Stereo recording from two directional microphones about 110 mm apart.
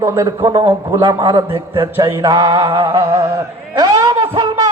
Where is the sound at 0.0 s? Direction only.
25° right (ahead or behind).